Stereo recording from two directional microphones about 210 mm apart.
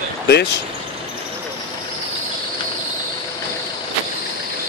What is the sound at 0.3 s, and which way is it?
Speech, 55° left (ahead or behind).